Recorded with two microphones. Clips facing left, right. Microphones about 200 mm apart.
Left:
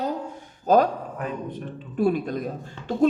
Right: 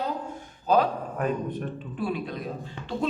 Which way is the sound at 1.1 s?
50° right (ahead or behind).